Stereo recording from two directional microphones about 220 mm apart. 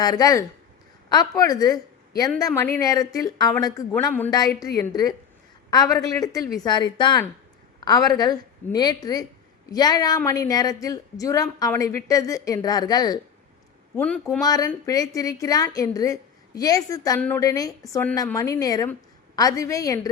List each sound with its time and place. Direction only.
0.0 s a woman's voice: 15° left (ahead or behind)
13.9 s speech: 5° left (ahead or behind)
14.4 s a woman's voice: 15° left (ahead or behind)